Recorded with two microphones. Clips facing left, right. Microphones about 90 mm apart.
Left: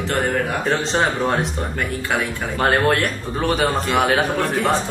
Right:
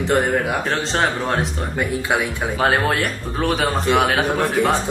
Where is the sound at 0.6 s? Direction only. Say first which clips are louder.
Left 1 dB; centre (ahead or behind).